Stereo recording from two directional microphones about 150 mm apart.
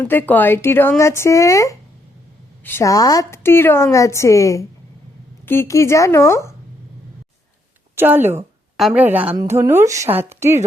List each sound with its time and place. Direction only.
0.0 s a woman's voice: 10° left (ahead or behind)
7.9 s a woman's voice: 15° right (ahead or behind)